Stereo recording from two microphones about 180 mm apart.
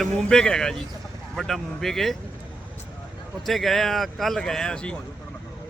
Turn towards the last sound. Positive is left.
turn(degrees=5)  # may be behind; listen again after turning